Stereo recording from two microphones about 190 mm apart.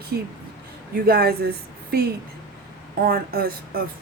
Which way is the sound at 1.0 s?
55° right (ahead or behind).